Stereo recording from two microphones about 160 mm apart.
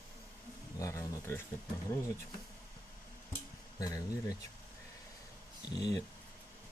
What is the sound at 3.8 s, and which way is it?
Speech, 20° left (ahead or behind).